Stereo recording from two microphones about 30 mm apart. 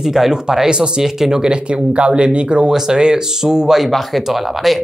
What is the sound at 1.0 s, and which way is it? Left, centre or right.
Speech, centre.